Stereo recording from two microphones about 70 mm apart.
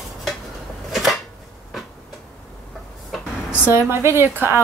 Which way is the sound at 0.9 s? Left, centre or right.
Centre.